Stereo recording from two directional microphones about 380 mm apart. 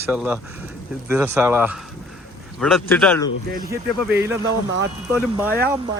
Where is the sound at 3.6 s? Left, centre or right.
Centre.